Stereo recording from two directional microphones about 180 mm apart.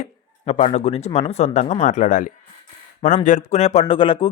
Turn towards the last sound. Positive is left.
turn(degrees=30)  # may be behind; listen again after turning